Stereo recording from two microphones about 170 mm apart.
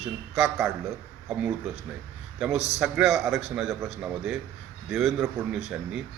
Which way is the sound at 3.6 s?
15° right (ahead or behind).